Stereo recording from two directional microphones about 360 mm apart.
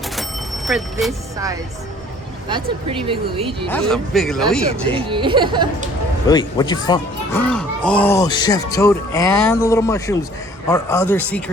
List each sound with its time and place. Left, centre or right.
0.2 s a sound: centre
2.5 s speech: centre
3.7 s speech: centre
4.9 s speech: centre
6.2 s speech: centre